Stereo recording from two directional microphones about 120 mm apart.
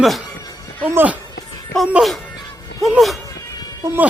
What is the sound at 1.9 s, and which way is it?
Speech, centre (ahead or behind).